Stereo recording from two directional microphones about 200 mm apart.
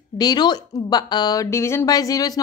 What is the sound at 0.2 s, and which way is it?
A woman's voice, 20° left (ahead or behind).